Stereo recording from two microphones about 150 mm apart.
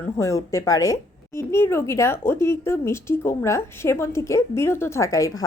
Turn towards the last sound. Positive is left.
turn(degrees=20)  # may be behind; listen again after turning